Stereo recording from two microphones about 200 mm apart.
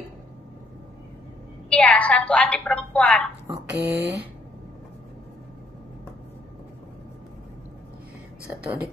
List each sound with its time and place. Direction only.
1.7 s a woman's voice: 5° left (ahead or behind)
3.7 s speech: 60° right (ahead or behind)